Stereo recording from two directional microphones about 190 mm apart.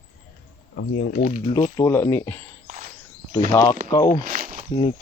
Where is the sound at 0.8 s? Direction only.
60° left (ahead or behind).